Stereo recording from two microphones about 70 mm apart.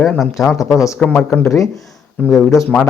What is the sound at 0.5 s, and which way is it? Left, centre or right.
Speech, left.